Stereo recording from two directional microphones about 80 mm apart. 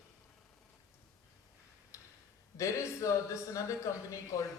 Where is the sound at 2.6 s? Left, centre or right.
Left.